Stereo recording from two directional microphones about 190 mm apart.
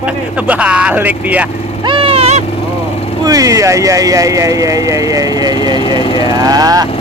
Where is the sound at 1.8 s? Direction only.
25° right (ahead or behind).